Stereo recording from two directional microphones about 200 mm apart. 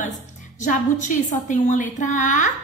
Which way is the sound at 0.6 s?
40° left (ahead or behind).